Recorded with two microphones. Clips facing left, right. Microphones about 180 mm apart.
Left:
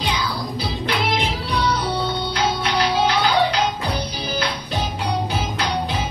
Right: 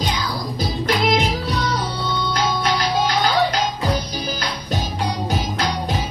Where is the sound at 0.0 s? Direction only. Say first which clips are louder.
Even; 45° right (ahead or behind).